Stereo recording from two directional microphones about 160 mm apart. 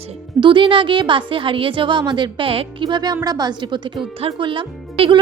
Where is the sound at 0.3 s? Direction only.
30° right (ahead or behind).